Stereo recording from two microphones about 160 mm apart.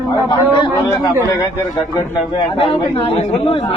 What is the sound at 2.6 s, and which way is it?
Speech, 35° left (ahead or behind).